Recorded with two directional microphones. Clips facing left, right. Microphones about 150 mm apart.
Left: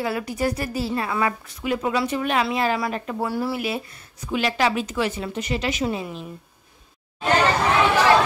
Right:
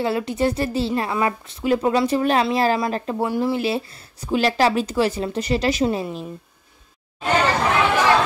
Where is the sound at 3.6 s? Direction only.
30° right (ahead or behind).